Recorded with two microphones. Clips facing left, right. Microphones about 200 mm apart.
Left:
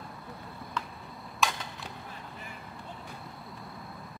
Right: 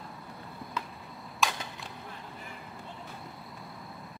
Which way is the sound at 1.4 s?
Centre (ahead or behind).